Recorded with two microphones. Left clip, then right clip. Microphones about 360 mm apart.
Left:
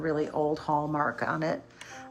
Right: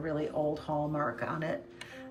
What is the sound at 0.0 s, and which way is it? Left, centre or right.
Speech, centre.